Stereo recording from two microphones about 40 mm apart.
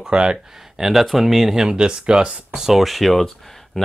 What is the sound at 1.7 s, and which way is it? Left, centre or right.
Speech, right.